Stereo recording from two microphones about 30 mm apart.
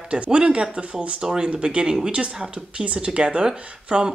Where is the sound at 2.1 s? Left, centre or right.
Right.